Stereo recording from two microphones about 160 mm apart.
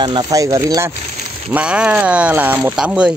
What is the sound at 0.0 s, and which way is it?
Speech, 25° right (ahead or behind).